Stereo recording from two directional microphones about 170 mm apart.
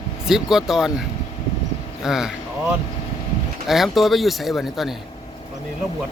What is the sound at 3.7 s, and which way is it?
Speech, centre (ahead or behind).